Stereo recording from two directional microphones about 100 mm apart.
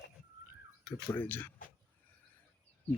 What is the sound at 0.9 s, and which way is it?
Speech, 20° left (ahead or behind).